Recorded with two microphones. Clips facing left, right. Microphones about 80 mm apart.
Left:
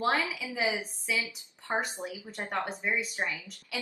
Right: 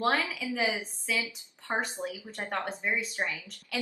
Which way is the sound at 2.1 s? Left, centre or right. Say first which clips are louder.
Even; centre.